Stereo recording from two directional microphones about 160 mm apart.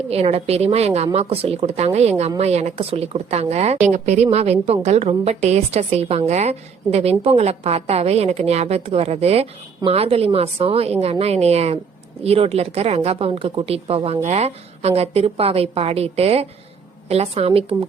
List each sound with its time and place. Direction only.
0.1 s a woman's voice: 40° right (ahead or behind)